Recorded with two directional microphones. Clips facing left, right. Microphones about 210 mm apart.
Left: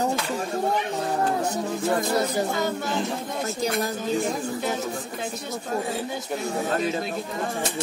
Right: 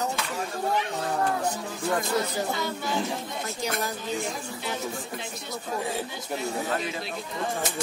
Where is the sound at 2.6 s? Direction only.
50° left (ahead or behind).